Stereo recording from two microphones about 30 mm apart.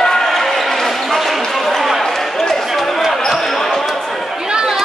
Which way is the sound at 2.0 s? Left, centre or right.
Centre.